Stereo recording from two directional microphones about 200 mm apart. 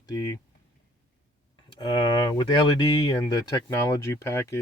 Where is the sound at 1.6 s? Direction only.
20° left (ahead or behind).